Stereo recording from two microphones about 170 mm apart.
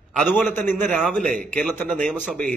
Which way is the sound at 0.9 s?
5° left (ahead or behind).